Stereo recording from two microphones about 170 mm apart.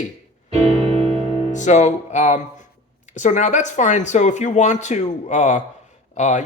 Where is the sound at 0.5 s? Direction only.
40° right (ahead or behind).